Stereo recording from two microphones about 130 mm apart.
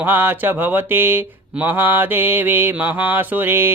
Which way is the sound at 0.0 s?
15° right (ahead or behind).